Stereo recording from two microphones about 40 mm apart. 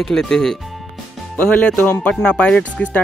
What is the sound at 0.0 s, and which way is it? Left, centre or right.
Speech, centre.